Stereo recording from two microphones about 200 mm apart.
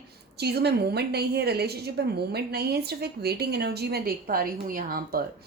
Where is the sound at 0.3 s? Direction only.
55° right (ahead or behind).